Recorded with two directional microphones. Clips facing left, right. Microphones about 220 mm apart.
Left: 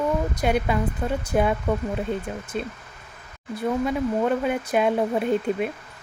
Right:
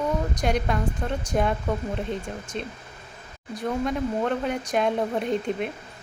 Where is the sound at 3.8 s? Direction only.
5° left (ahead or behind).